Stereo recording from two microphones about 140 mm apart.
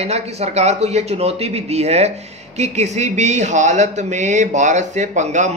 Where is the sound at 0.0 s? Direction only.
50° right (ahead or behind).